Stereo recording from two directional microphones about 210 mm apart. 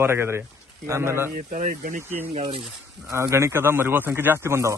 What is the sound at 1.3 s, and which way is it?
Speech, 40° right (ahead or behind).